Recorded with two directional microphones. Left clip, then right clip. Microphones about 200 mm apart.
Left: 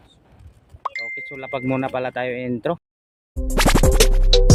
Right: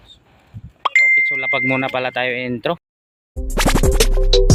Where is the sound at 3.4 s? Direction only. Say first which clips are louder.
Even; centre (ahead or behind).